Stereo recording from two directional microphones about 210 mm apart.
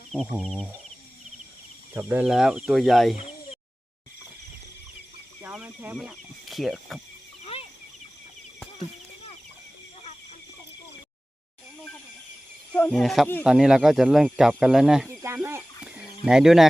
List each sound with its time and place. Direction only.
0.3 s speech: centre (ahead or behind)
1.9 s speech: 10° right (ahead or behind)
3.2 s a sound: 30° left (ahead or behind)
5.4 s speech: 5° right (ahead or behind)
12.7 s speech: 5° left (ahead or behind)